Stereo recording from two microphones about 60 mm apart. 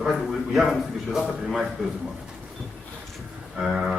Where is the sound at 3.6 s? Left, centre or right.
Centre.